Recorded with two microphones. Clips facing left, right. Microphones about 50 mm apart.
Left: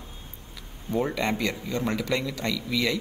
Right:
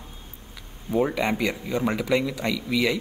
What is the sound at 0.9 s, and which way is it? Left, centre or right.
A man's voice, centre.